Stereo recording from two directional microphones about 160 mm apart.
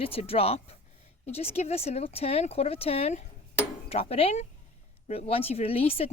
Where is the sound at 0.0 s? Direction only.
35° left (ahead or behind).